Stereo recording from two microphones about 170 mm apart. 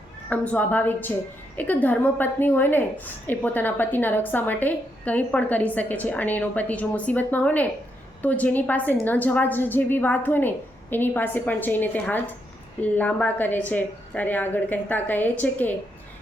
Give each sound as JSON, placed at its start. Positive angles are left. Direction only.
{"t": 0.3, "sound": "a woman's voice", "side_deg": 10}